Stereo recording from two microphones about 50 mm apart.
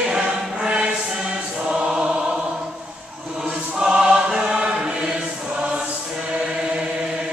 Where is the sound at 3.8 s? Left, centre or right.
Centre.